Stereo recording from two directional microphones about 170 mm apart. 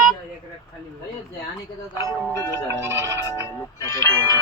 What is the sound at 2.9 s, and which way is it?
Speech, 15° right (ahead or behind).